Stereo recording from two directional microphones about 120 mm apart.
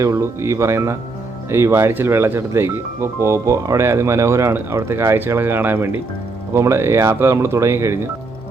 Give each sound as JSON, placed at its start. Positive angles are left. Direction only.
{"t": 0.0, "sound": "speech", "side_deg": -25}